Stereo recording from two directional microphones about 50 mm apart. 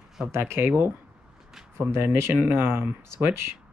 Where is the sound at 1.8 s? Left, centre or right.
Right.